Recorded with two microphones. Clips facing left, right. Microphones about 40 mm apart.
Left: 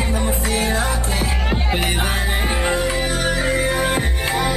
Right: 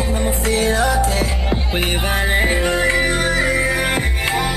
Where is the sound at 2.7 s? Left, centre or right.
Right.